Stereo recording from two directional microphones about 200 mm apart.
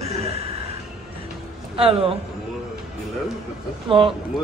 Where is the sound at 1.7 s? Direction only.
30° right (ahead or behind).